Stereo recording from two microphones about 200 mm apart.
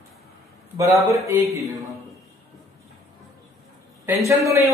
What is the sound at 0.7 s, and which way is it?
Speech, 15° right (ahead or behind).